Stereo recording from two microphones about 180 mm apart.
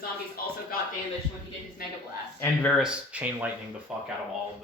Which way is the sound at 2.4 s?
5° left (ahead or behind).